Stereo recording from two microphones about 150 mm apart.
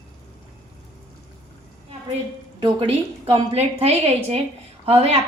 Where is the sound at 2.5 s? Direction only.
30° right (ahead or behind).